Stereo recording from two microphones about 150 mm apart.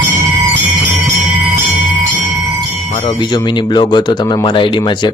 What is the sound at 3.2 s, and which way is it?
Speech, 30° left (ahead or behind).